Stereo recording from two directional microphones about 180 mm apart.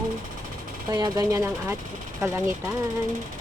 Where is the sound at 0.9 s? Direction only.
20° right (ahead or behind).